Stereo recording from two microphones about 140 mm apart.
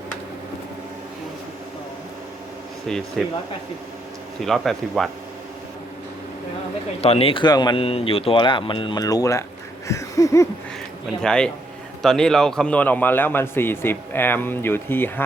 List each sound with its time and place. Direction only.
2.9 s speech: 5° left (ahead or behind)
4.4 s speech: centre (ahead or behind)
7.0 s speech: 45° left (ahead or behind); by 9.4 s 25° left (ahead or behind)
9.8 s a sound: 20° left (ahead or behind)
11.2 s a man's voice: 5° left (ahead or behind)